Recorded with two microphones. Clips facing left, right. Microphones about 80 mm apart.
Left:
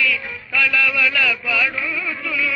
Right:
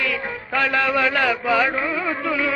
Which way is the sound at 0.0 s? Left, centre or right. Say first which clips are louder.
Left 2 dB; right.